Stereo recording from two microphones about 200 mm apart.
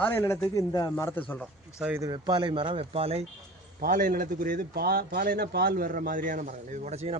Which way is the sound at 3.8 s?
40° right (ahead or behind).